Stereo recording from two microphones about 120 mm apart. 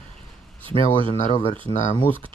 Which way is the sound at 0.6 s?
50° right (ahead or behind).